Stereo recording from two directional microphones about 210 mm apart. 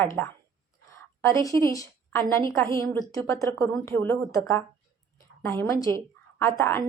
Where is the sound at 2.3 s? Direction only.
15° left (ahead or behind).